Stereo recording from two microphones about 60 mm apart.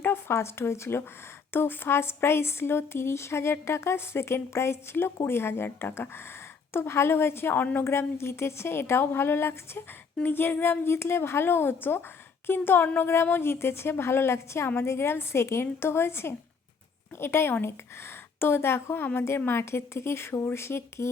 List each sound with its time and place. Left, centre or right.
0.0 s a sound: left
0.3 s speech: left
7.9 s a woman's voice: left